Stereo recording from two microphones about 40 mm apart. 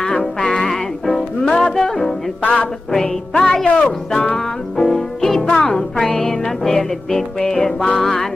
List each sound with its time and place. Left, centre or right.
0.0 s music: centre
2.4 s music: left
2.9 s music: centre
8.0 s music: centre